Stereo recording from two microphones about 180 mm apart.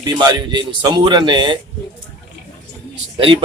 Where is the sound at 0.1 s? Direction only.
25° right (ahead or behind).